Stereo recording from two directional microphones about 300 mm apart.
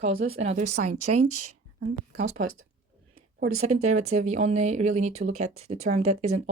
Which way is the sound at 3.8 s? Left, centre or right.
Right.